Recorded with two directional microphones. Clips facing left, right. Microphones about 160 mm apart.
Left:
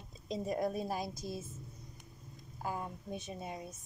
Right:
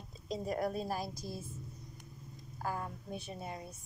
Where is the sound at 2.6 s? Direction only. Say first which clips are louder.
Even; 20° left (ahead or behind).